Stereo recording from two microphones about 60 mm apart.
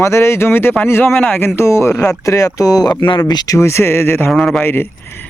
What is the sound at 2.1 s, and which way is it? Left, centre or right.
Speech, left.